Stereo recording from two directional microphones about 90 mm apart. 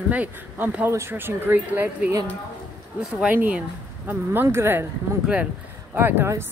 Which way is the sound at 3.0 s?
5° right (ahead or behind).